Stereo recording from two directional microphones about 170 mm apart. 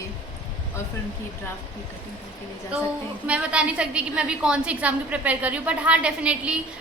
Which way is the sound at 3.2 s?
5° right (ahead or behind).